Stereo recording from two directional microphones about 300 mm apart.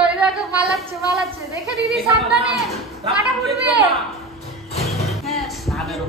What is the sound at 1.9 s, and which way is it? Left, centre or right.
A woman's voice, centre.